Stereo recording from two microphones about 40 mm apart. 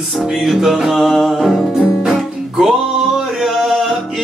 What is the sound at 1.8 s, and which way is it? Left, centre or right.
Music, centre.